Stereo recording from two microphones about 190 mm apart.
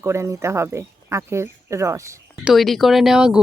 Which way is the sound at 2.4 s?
Centre (ahead or behind).